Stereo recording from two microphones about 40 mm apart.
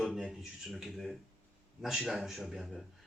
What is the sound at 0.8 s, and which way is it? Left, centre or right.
Speech, centre.